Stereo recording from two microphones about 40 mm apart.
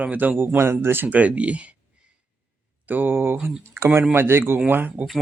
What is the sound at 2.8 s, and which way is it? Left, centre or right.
Speech, right.